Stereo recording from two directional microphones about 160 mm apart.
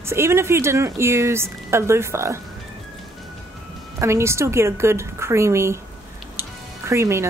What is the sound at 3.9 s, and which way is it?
Speech, 15° right (ahead or behind).